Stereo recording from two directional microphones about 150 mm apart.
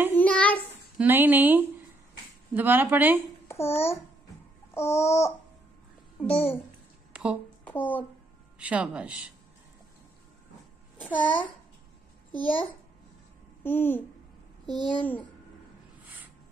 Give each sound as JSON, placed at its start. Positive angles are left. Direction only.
{"t": 0.1, "sound": "a sound", "side_deg": 10}
{"t": 0.9, "sound": "speech", "side_deg": -15}
{"t": 3.4, "sound": "a child's voice", "side_deg": 15}
{"t": 4.7, "sound": "babbling", "side_deg": 15}
{"t": 7.1, "sound": "a sound", "side_deg": -5}
{"t": 7.6, "sound": "speech", "side_deg": 10}
{"t": 8.5, "sound": "speech", "side_deg": -10}
{"t": 11.0, "sound": "a child's voice", "side_deg": 10}
{"t": 13.7, "sound": "babbling", "side_deg": 15}
{"t": 16.0, "sound": "a sound", "side_deg": -10}